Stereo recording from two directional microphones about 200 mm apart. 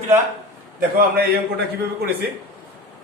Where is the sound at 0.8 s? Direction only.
50° right (ahead or behind).